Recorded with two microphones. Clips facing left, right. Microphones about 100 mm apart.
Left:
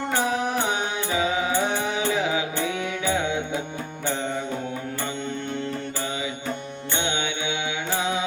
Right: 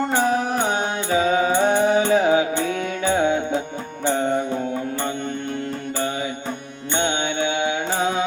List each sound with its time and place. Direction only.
0.2 s music: 40° right (ahead or behind)
7.0 s music: 50° right (ahead or behind)